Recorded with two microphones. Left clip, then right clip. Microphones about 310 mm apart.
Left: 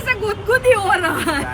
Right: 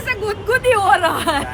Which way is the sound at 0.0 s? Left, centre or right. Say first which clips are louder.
Left 1 dB; centre.